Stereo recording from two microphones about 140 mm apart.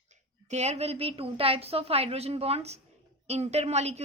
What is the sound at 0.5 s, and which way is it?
A woman's voice, 50° right (ahead or behind).